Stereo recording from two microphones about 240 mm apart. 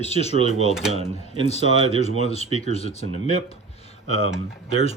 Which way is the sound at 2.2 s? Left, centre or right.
Left.